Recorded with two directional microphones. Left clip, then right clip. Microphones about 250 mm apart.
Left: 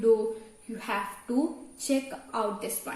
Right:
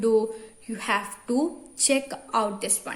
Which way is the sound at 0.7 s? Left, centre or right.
Right.